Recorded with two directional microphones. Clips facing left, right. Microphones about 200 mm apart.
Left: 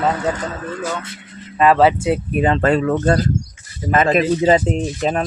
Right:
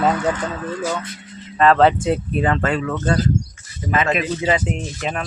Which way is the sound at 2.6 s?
40° left (ahead or behind).